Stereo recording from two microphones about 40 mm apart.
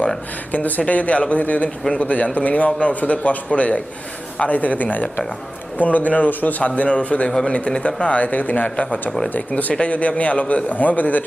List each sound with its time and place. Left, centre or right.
0.5 s a man's voice: left
7.3 s speech: centre
7.7 s a man's voice: left
8.7 s a man's voice: left
9.0 s speech: centre
9.3 s a man's voice: left
9.7 s a man's voice: left